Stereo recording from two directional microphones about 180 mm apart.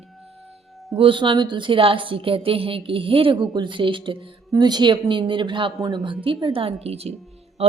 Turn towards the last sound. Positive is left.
turn(degrees=-35)  # may be behind; listen again after turning